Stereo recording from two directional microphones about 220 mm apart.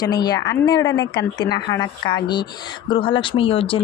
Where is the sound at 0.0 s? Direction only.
20° left (ahead or behind).